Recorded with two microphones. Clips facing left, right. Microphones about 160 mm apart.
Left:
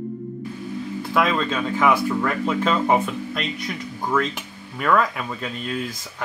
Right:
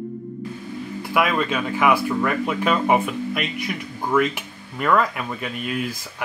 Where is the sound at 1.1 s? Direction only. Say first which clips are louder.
Even; 10° right (ahead or behind).